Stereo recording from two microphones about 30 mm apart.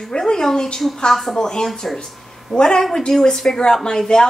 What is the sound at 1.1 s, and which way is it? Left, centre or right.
A woman's voice, centre.